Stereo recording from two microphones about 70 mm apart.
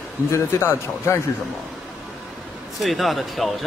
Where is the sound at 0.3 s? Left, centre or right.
Left.